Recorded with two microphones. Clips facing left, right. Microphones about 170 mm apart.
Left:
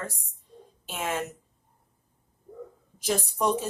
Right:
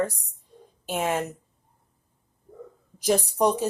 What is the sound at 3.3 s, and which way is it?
Speech, 35° right (ahead or behind).